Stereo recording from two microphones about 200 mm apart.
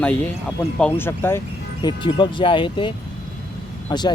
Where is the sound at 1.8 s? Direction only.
25° left (ahead or behind).